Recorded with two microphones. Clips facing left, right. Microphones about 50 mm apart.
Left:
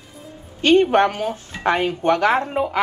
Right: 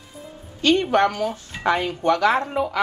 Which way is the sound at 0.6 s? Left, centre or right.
Left.